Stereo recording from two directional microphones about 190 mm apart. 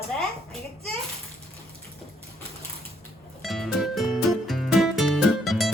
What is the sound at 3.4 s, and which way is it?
Music, centre (ahead or behind).